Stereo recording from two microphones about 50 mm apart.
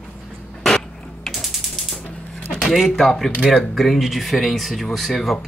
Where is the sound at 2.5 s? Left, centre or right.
Centre.